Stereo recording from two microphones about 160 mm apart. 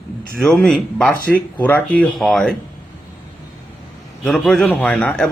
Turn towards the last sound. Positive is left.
turn(degrees=5)  # may be behind; listen again after turning